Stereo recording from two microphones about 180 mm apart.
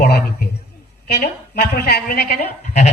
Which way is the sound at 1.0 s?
60° left (ahead or behind).